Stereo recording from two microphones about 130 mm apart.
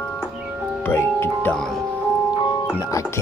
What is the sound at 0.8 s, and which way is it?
Speech, 15° left (ahead or behind).